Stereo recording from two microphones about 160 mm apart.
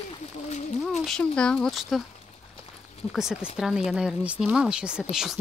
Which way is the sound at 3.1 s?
5° right (ahead or behind).